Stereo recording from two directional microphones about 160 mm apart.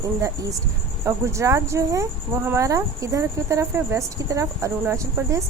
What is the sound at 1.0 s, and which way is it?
A woman's voice, 20° right (ahead or behind).